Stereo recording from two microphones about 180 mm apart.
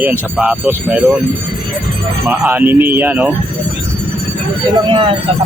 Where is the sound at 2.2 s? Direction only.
10° right (ahead or behind).